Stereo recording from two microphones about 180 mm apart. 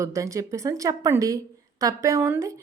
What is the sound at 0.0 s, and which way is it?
A woman's voice, 15° right (ahead or behind).